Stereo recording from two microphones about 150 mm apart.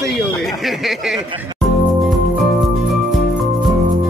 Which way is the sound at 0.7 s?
Centre (ahead or behind).